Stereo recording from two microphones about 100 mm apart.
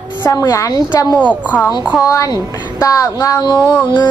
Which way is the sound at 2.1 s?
35° left (ahead or behind).